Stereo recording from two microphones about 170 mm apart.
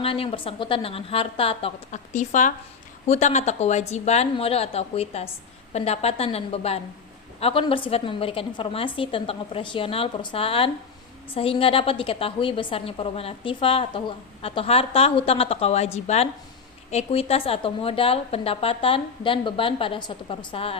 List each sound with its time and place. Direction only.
0.0 s a woman's voice: 35° left (ahead or behind)
2.1 s a woman's voice: 45° left (ahead or behind); by 20.7 s 30° left (ahead or behind)